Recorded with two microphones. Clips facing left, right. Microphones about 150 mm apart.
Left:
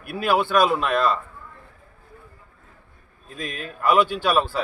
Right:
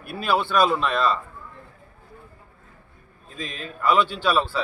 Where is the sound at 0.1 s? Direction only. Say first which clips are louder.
Left 2 dB; 10° left (ahead or behind).